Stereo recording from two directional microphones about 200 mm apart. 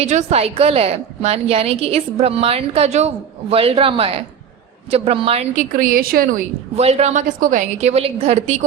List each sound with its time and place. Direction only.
0.0 s a woman's voice: 35° right (ahead or behind)
6.7 s a woman's voice: 30° right (ahead or behind)